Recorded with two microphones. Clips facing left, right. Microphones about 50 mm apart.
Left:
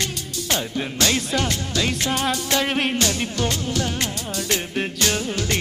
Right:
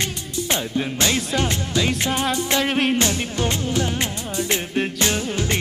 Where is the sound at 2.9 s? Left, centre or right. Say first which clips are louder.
Right 1 dB; right.